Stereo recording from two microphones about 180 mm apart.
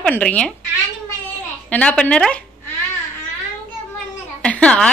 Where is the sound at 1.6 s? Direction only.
5° left (ahead or behind).